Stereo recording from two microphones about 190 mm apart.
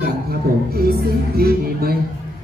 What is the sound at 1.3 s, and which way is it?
Speech, 50° right (ahead or behind).